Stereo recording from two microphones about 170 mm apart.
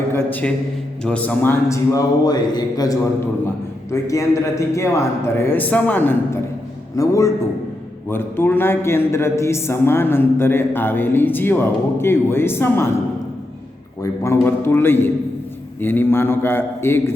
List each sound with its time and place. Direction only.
0.1 s a man's voice: 10° left (ahead or behind)
14.0 s a man's voice: 15° left (ahead or behind)